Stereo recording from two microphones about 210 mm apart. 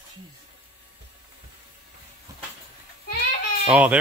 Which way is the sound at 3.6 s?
5° right (ahead or behind).